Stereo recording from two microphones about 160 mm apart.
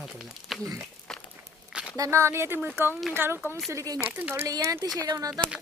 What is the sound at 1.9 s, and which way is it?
Speech, 20° right (ahead or behind).